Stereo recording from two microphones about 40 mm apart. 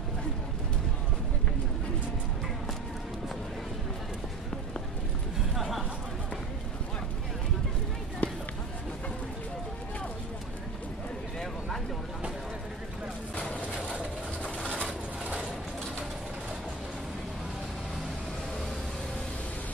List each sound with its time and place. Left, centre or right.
5.6 s chatter: centre
8.2 s run: left
13.4 s vehicle: left